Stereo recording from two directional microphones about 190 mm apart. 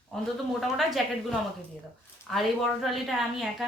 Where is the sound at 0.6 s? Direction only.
Centre (ahead or behind).